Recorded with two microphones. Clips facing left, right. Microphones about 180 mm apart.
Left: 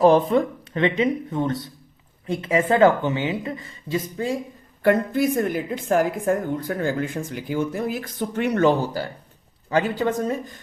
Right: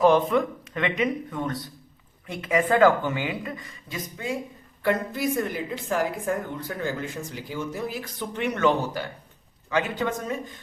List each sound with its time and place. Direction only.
0.0 s a woman's voice: 35° left (ahead or behind)
4.8 s a woman's voice: 50° left (ahead or behind); by 10.5 s 35° left (ahead or behind)